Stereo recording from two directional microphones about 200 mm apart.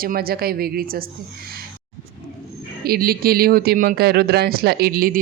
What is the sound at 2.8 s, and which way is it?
Speech, 50° right (ahead or behind).